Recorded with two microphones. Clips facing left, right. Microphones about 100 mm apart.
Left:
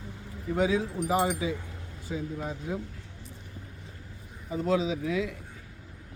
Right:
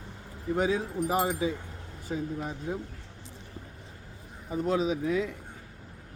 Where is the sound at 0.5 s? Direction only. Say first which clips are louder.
Left 1 dB; 40° right (ahead or behind).